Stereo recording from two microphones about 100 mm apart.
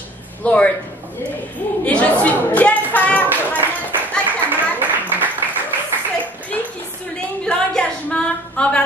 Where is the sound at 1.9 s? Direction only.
15° left (ahead or behind).